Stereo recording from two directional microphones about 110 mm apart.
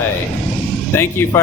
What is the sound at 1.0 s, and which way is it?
Speech, 20° left (ahead or behind).